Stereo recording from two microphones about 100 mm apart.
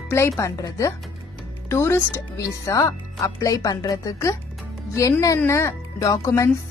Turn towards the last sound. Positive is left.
turn(degrees=30)  # may be behind; listen again after turning